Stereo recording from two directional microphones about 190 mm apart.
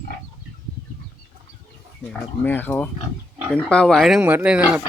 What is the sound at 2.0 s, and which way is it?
Speech, 10° left (ahead or behind).